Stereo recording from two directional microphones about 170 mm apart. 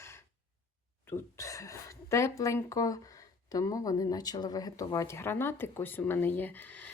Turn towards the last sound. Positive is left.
turn(degrees=10)  # may be behind; listen again after turning